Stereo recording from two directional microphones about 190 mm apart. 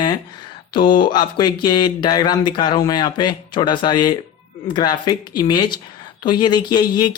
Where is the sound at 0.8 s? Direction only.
45° left (ahead or behind).